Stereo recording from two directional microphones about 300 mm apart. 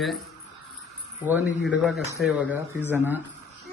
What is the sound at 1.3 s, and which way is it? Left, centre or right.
A man's voice, centre.